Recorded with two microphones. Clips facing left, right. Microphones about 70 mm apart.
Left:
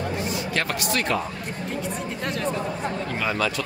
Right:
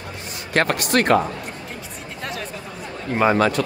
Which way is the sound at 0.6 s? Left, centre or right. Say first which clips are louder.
Right 9 dB; right.